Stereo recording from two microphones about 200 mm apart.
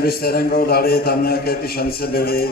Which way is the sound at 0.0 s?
50° left (ahead or behind).